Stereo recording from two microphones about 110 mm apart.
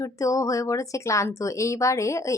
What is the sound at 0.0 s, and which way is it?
Speech, 30° left (ahead or behind).